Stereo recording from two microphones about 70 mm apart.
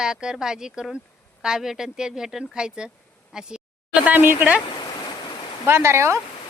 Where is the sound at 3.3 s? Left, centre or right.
Centre.